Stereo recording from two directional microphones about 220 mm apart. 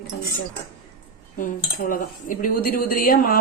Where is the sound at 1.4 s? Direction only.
40° left (ahead or behind).